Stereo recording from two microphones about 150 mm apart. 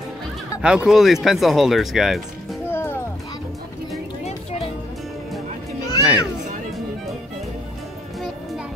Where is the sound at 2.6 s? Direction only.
15° left (ahead or behind).